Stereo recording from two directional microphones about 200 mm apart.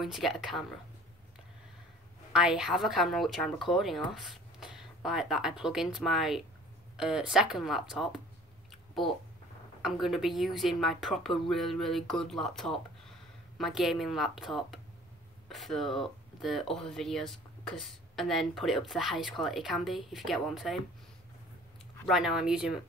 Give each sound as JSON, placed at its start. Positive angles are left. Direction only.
{"t": 0.0, "sound": "speech", "side_deg": 0}
{"t": 2.3, "sound": "speech", "side_deg": -5}
{"t": 9.8, "sound": "speech", "side_deg": 0}
{"t": 22.0, "sound": "speech", "side_deg": 0}